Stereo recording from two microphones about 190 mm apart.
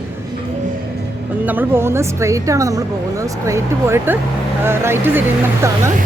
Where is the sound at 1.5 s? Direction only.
10° right (ahead or behind).